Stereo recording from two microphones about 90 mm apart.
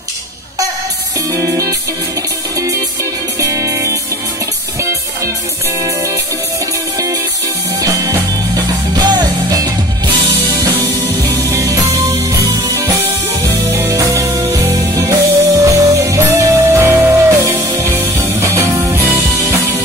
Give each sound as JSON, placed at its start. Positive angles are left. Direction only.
{"t": 1.3, "sound": "music", "side_deg": -35}
{"t": 3.3, "sound": "music", "side_deg": -35}
{"t": 7.8, "sound": "music", "side_deg": -40}
{"t": 10.5, "sound": "music", "side_deg": -20}
{"t": 11.5, "sound": "music", "side_deg": -40}